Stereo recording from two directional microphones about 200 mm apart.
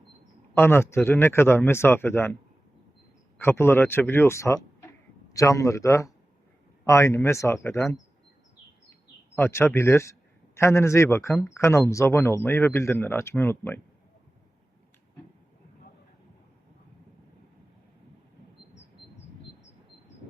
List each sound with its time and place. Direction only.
0.5 s a man's voice: 10° left (ahead or behind)
3.4 s a man's voice: 10° left (ahead or behind)
9.4 s a man's voice: 10° left (ahead or behind)